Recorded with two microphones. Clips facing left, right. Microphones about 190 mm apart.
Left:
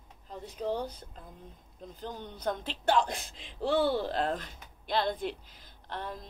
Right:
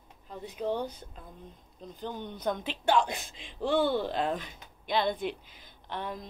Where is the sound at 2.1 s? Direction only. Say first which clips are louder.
Right 4 dB; 30° left (ahead or behind).